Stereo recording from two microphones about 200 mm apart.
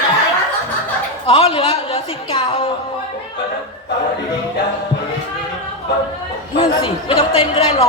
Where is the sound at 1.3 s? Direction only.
25° left (ahead or behind).